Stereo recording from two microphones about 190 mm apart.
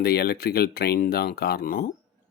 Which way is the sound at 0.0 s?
55° left (ahead or behind).